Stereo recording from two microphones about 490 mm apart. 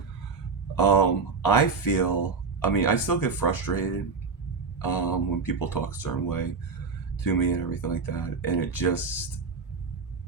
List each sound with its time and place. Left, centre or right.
0.8 s speech: left